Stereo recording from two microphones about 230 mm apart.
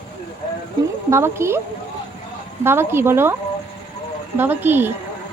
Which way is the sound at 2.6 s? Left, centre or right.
Centre.